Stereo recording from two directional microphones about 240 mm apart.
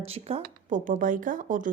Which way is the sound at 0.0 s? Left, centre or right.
Right.